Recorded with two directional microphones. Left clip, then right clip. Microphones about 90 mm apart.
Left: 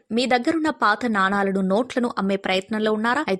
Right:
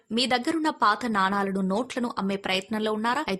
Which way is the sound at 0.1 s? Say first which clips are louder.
Left 5 dB; 45° left (ahead or behind).